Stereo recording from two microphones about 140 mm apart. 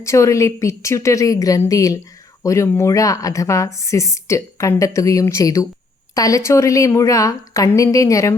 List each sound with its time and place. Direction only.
0.0 s a woman's voice: 20° left (ahead or behind)